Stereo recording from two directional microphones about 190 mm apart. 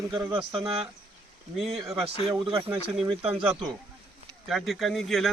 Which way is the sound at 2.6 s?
5° right (ahead or behind).